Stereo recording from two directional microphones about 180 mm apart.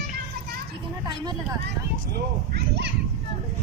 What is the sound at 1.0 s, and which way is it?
Speech, 25° right (ahead or behind).